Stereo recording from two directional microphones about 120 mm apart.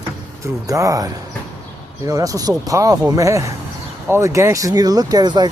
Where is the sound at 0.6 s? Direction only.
30° right (ahead or behind).